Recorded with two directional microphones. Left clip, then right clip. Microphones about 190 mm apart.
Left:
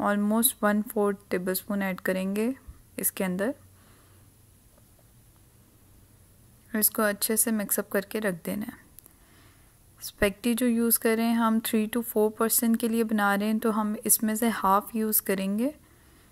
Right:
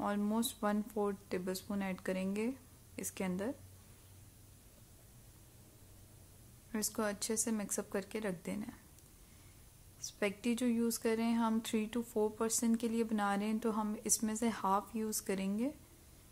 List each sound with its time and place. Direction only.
0.0 s speech: 30° left (ahead or behind)
6.7 s speech: 30° left (ahead or behind)
9.9 s speech: 30° left (ahead or behind)